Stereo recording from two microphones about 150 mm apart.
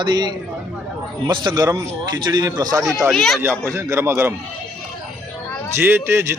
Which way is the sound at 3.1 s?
Centre (ahead or behind).